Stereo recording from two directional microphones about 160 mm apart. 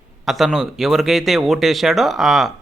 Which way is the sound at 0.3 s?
Centre (ahead or behind).